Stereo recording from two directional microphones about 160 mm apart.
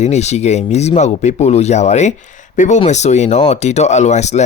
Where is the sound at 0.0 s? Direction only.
45° left (ahead or behind).